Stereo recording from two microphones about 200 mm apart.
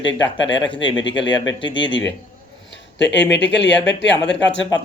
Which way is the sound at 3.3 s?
60° left (ahead or behind).